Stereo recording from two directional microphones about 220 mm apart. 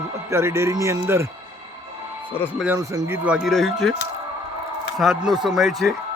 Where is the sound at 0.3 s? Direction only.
10° right (ahead or behind).